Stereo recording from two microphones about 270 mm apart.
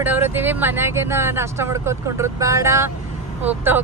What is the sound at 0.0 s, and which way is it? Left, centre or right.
Speech, centre.